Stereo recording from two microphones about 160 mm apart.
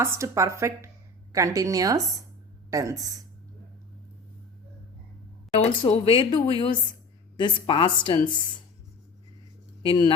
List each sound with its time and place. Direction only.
0.0 s a woman's voice: 15° right (ahead or behind)
5.5 s speech: 40° left (ahead or behind)
9.8 s speech: 35° left (ahead or behind)